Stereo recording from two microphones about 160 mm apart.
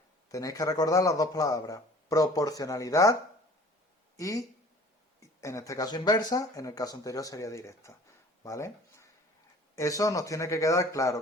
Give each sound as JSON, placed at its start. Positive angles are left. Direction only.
{"t": 0.3, "sound": "speech", "side_deg": 20}
{"t": 4.2, "sound": "speech", "side_deg": 20}